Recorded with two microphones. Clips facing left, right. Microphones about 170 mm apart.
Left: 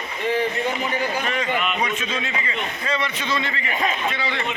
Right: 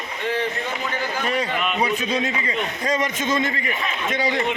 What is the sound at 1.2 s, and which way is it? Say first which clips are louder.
A man's voice: right 1 dB; 35° right (ahead or behind).